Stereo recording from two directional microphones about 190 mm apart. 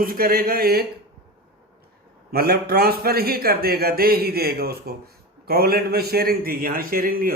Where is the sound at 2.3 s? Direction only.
55° right (ahead or behind).